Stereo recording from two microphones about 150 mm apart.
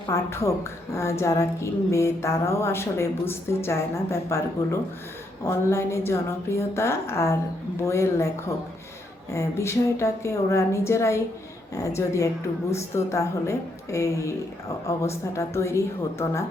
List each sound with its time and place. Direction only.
0.1 s a woman's voice: 20° left (ahead or behind)
9.3 s a woman's voice: 20° left (ahead or behind)